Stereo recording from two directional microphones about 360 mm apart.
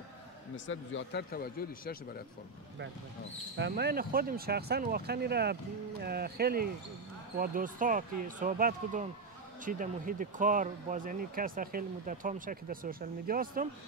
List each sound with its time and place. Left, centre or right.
0.7 s speech: left
3.5 s speech: right